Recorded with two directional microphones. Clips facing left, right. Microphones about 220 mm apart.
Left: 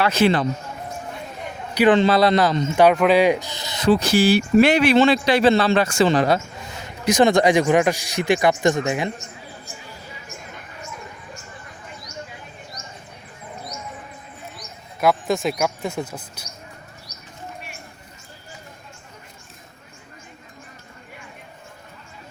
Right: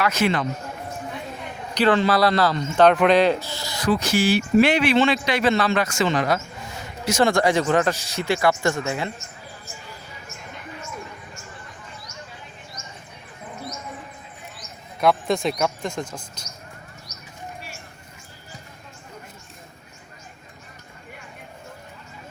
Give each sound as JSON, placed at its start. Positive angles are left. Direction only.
{"t": 0.0, "sound": "a man's voice", "side_deg": 30}
{"t": 1.7, "sound": "a man's voice", "side_deg": 15}
{"t": 2.0, "sound": "speech", "side_deg": 25}
{"t": 2.9, "sound": "a man's voice", "side_deg": 5}
{"t": 7.0, "sound": "speech", "side_deg": 15}
{"t": 12.8, "sound": "a sound", "side_deg": 35}
{"t": 15.0, "sound": "speech", "side_deg": 0}